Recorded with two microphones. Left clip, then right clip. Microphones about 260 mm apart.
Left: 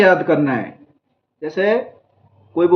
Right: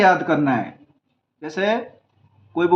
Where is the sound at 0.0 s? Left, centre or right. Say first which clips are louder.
Left 3 dB; centre.